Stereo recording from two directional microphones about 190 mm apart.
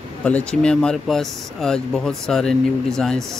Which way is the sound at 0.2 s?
5° left (ahead or behind).